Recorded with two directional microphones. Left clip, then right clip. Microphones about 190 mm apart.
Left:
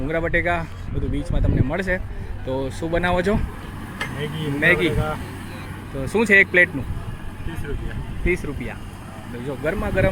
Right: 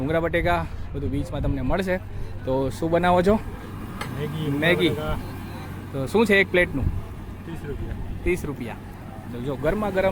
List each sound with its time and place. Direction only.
0.1 s speech: 10° right (ahead or behind)
6.0 s speech: 5° right (ahead or behind)
8.2 s speech: centre (ahead or behind)